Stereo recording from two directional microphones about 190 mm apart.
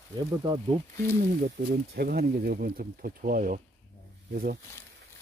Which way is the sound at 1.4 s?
60° right (ahead or behind).